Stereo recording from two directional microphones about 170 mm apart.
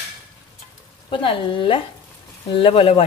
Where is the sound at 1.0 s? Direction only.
30° left (ahead or behind).